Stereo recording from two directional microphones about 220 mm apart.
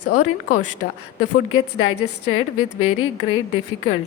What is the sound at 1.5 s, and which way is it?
A woman's voice, 70° left (ahead or behind).